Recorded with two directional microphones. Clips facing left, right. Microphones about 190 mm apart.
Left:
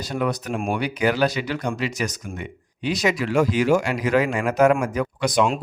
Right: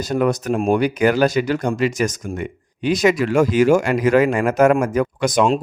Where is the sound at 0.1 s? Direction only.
45° right (ahead or behind).